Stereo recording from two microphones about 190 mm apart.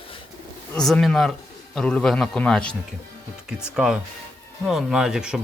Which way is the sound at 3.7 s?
5° right (ahead or behind).